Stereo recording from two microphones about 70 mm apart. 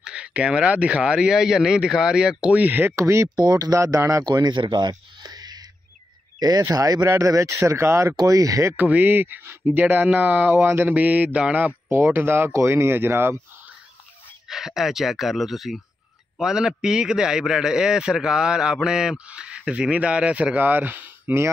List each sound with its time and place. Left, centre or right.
0.0 s a man's voice: centre
2.5 s speech: right
3.0 s speech: right
3.3 s speech: right
4.3 s a sound: right
6.7 s speech: right
7.1 s speech: right
8.2 s speech: right
8.7 s speech: right
14.5 s a man's voice: centre; by 21.4 s right